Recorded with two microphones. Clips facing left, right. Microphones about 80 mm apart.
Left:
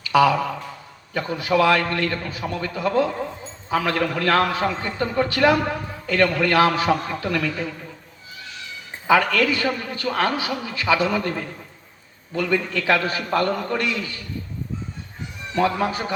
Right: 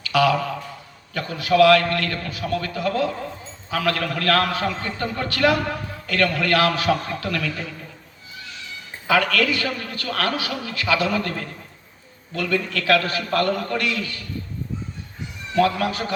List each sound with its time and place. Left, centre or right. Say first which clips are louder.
0.1 s a sound: left 2 dB; left
1.1 s a man's voice: right 1 dB; left
9.0 s a man's voice: left 2 dB; left
15.5 s a man's voice: right 1 dB; left